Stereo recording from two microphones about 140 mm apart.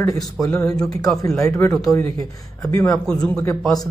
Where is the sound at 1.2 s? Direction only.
20° left (ahead or behind).